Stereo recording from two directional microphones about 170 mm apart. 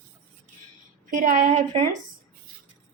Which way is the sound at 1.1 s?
50° right (ahead or behind).